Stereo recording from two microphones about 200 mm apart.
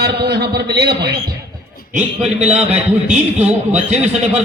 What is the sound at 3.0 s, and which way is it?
A man's voice, 35° right (ahead or behind).